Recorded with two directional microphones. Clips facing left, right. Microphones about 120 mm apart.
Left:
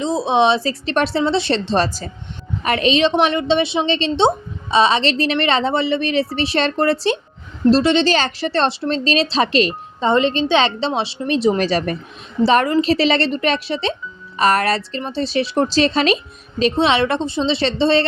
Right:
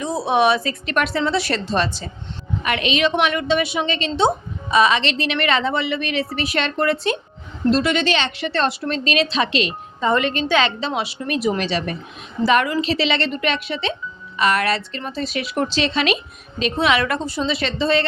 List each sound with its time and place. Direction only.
0.0 s a woman's voice: 20° left (ahead or behind); by 10.1 s 40° left (ahead or behind)
10.1 s a woman's voice: 25° left (ahead or behind)
11.6 s a woman's voice: 40° left (ahead or behind)